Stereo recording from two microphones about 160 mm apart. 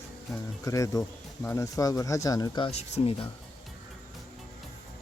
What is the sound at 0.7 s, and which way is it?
Speech, 20° left (ahead or behind).